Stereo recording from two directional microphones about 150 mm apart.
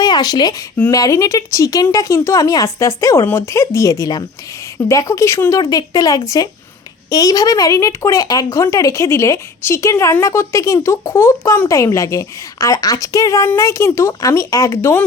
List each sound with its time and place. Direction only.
0.0 s speech: 25° left (ahead or behind)